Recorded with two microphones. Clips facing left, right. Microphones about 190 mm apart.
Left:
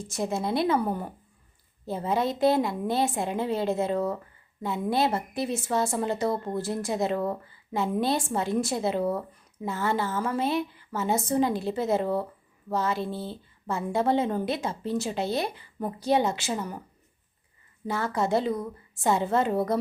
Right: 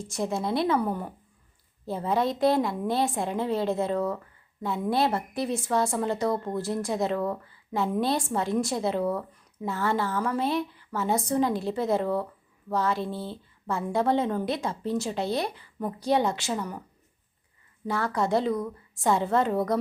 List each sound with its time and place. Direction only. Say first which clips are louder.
0.1 s a woman's voice: even; centre (ahead or behind)
2.0 s a woman's voice: even; 5° left (ahead or behind)
16.5 s speech: even; 25° left (ahead or behind)
18.0 s a woman's voice: even; 5° left (ahead or behind)